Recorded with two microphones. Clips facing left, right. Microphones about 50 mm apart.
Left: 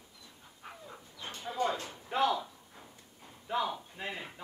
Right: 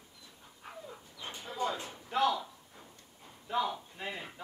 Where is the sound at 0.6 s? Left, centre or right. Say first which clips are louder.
Right 1 dB; centre.